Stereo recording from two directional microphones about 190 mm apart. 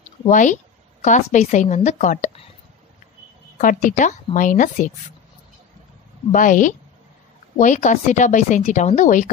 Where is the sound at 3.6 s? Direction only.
45° left (ahead or behind).